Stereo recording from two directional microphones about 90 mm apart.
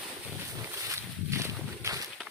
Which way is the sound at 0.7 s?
30° right (ahead or behind).